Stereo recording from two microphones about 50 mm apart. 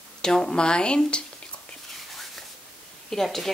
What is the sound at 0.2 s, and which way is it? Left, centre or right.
Speech, centre.